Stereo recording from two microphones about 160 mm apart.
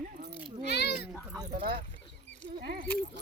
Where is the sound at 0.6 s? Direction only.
90° left.